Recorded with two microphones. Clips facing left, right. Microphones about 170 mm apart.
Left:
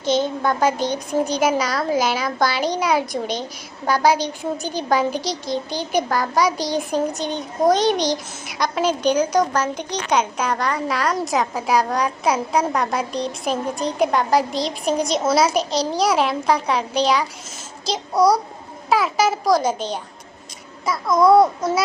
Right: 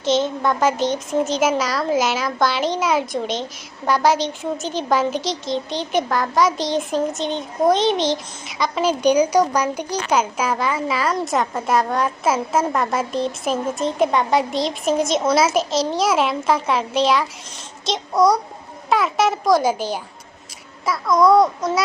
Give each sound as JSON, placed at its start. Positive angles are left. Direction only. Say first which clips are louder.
{"t": 0.0, "sound": "a child's voice", "louder": "right 1 dB", "side_deg": 0}
{"t": 21.1, "sound": "speech", "louder": "even", "side_deg": 25}